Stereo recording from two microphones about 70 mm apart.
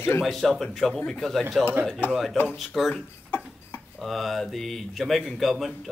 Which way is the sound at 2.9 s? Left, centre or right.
Left.